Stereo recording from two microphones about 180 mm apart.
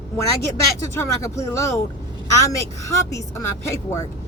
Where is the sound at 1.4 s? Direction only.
15° left (ahead or behind).